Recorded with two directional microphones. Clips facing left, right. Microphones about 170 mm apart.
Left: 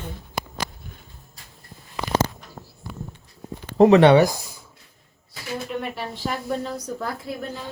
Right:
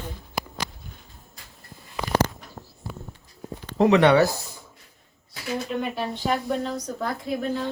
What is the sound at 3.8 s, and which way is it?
Speech, 35° left (ahead or behind).